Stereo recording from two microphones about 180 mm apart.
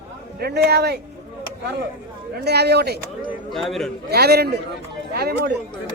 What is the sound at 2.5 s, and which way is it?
Speech, 65° right (ahead or behind).